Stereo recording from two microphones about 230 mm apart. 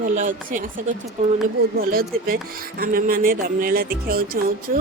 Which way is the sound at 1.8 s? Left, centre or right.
Right.